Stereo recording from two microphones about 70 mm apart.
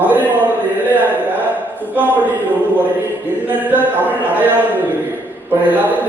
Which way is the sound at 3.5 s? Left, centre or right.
Right.